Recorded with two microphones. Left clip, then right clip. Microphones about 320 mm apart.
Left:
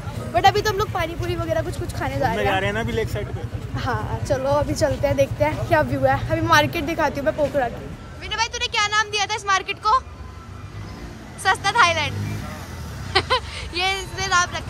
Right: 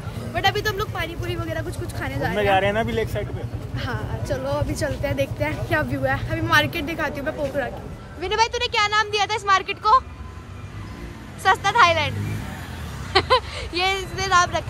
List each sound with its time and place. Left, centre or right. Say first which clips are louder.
0.3 s a woman's voice: left 5 dB; centre
2.5 s speech: right 3 dB; centre
3.7 s a woman's voice: left 5 dB; centre
11.4 s a woman's voice: right 1 dB; centre